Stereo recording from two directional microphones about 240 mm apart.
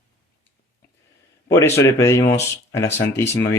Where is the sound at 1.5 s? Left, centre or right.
Centre.